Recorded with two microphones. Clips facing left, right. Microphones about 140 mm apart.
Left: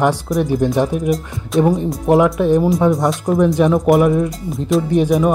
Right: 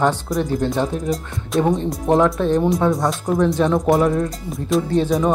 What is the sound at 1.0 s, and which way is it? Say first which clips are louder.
Speech: left 4 dB; centre (ahead or behind).